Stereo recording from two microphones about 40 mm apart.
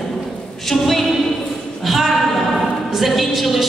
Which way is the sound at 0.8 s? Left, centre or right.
Centre.